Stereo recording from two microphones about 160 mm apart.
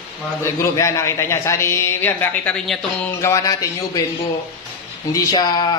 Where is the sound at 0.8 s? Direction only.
20° left (ahead or behind).